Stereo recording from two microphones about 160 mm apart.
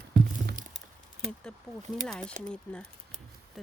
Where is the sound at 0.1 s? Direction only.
65° right (ahead or behind).